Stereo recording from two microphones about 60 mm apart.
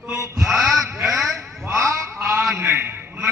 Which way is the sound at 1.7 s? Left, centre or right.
Right.